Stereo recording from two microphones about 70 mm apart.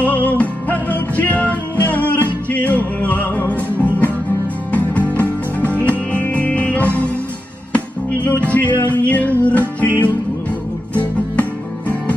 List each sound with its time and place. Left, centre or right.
0.0 s music: left